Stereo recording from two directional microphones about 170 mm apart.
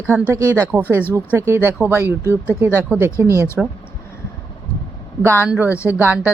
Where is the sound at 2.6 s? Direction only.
10° right (ahead or behind).